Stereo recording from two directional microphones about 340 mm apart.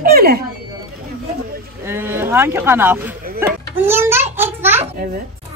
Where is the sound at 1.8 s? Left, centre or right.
Centre.